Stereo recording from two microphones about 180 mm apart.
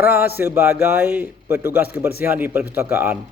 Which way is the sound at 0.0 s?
10° right (ahead or behind).